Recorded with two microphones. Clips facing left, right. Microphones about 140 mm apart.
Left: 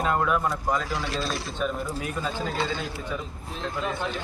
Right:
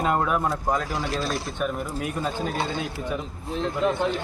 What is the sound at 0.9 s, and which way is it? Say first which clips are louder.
Speech: right 2 dB; 45° right (ahead or behind).